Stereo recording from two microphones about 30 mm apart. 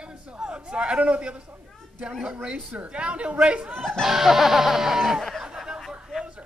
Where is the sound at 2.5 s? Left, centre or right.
Right.